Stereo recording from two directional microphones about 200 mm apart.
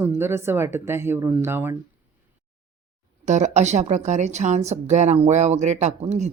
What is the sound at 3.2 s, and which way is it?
A woman's voice, 35° right (ahead or behind).